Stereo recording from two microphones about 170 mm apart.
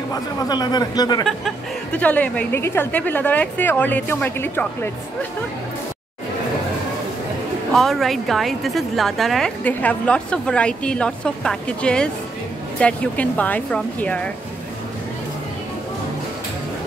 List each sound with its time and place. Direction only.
0.1 s speech: 20° left (ahead or behind)
1.2 s a woman's voice: 5° left (ahead or behind)
7.7 s a woman's voice: centre (ahead or behind)